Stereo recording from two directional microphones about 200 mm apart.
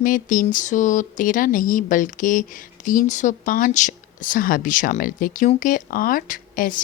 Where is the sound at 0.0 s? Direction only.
40° left (ahead or behind).